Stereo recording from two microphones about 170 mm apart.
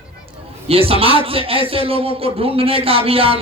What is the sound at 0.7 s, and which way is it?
A man's voice, 35° right (ahead or behind).